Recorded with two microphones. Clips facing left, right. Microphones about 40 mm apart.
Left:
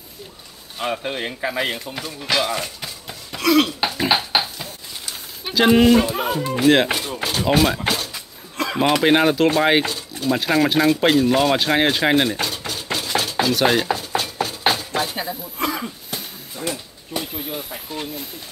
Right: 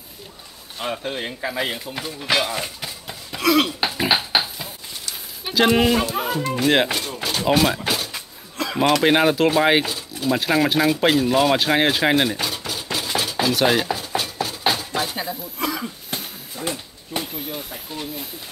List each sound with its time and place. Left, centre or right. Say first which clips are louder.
0.7 s speech: left 2 dB; centre
2.0 s speech: right 1 dB; centre
2.6 s a sound: even; centre
5.4 s speech: left 3 dB; centre
6.9 s a sound: left 2 dB; centre
7.2 s speech: left 1 dB; centre
7.9 s a sound: even; centre
8.7 s speech: even; centre
12.9 s cutlery: left 2 dB; centre
15.0 s speech: left 1 dB; centre
15.6 s cough: left 2 dB; left
16.6 s speech: left 1 dB; centre